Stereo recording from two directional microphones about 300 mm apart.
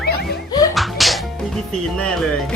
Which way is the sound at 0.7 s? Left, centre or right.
Centre.